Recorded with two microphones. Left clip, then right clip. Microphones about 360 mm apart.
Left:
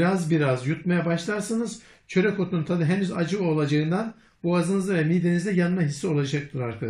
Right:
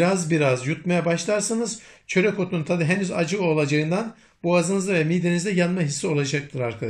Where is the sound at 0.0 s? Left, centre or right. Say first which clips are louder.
Right 3 dB; centre.